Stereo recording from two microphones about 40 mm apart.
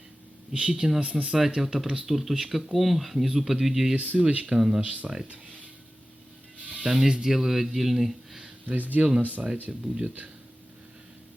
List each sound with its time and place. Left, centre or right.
0.5 s speech: right
1.6 s speech: centre
3.9 s speech: right
4.5 s speech: centre
4.8 s speech: right
6.6 s a sound: left
6.8 s speech: centre
8.6 s speech: right
9.8 s speech: right